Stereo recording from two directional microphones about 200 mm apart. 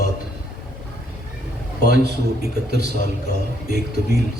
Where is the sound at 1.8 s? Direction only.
55° right (ahead or behind).